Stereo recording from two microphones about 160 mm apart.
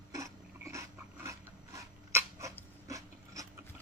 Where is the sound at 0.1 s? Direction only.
20° right (ahead or behind).